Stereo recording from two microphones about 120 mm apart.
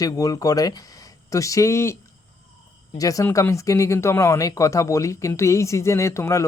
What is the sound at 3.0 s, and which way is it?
Speech, 30° left (ahead or behind).